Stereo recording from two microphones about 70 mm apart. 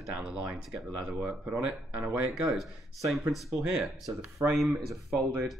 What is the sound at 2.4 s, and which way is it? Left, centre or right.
Speech, centre.